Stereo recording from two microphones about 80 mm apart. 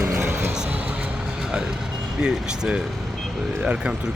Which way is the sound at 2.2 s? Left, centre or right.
Centre.